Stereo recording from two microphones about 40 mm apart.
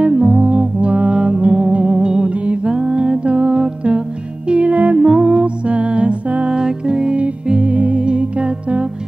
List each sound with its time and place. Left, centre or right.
0.1 s music: centre
0.4 s music: right
2.3 s mantra: right
4.5 s music: right
5.0 s music: centre
5.3 s music: right
6.5 s music: right
7.7 s music: right